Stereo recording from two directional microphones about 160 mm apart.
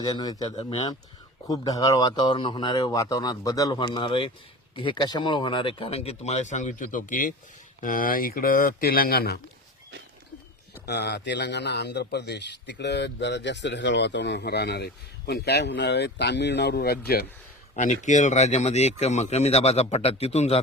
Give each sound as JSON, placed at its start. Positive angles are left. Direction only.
{"t": 0.0, "sound": "speech", "side_deg": 25}
{"t": 0.5, "sound": "speech", "side_deg": 35}
{"t": 1.5, "sound": "speech", "side_deg": 20}
{"t": 10.8, "sound": "a man's voice", "side_deg": 90}
{"t": 17.7, "sound": "speech", "side_deg": 50}